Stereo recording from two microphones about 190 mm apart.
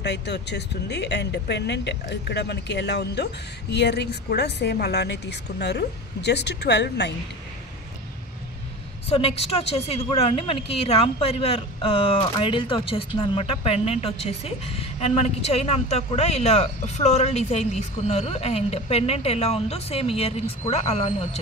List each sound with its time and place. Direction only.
0.0 s speech: 65° left (ahead or behind)
9.1 s a woman's voice: 30° left (ahead or behind)